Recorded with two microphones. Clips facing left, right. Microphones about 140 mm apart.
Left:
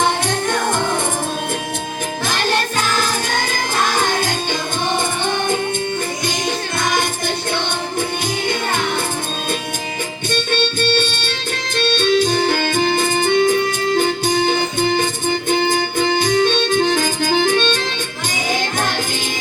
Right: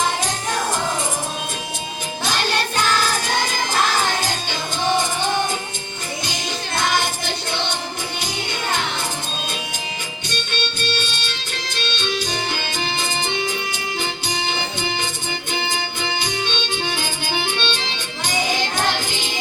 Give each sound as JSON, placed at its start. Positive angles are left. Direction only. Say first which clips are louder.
{"t": 0.3, "sound": "music", "louder": "left 4 dB", "side_deg": 60}
{"t": 10.2, "sound": "music", "louder": "left 9 dB", "side_deg": 50}